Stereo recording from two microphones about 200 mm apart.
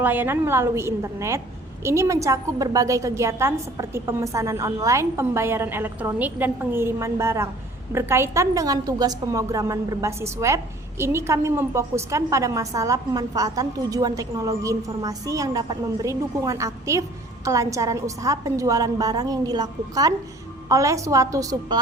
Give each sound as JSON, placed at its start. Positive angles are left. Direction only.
{"t": 0.0, "sound": "a woman's voice", "side_deg": -10}